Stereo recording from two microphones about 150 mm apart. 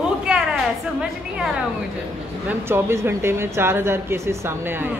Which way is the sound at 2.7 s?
15° right (ahead or behind).